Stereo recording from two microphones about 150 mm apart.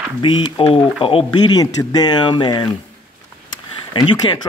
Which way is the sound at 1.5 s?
25° left (ahead or behind).